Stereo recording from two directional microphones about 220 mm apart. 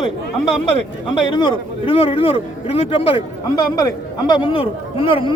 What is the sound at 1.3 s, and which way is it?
A man's voice, 20° left (ahead or behind).